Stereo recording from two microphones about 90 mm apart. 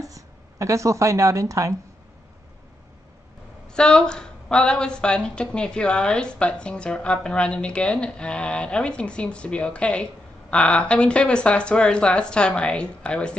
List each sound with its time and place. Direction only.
0.0 s a woman's voice: 35° right (ahead or behind)
3.6 s speech: 10° left (ahead or behind)